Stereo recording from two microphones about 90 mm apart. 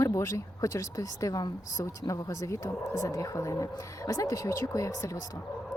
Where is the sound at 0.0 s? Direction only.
35° left (ahead or behind).